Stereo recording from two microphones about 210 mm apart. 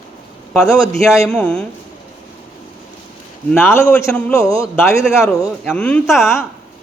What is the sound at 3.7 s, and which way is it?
Speech, 10° left (ahead or behind).